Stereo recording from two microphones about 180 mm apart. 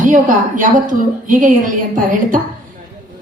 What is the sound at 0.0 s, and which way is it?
A woman's voice, 45° right (ahead or behind).